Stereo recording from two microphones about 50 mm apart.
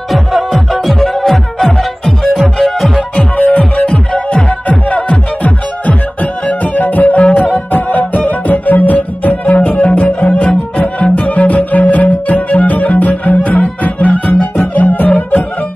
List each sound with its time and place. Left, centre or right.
0.1 s music: centre
3.0 s music: left
6.4 s music: left